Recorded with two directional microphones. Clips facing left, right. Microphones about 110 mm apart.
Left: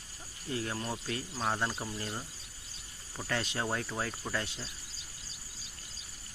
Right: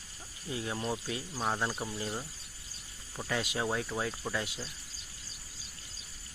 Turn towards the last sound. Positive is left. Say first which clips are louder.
# right 1 dB
turn(degrees=-5)  # may be behind; listen again after turning